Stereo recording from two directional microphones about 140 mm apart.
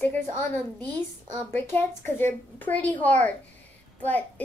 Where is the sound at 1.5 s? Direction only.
15° left (ahead or behind).